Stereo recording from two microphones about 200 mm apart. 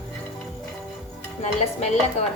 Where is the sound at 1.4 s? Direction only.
35° left (ahead or behind).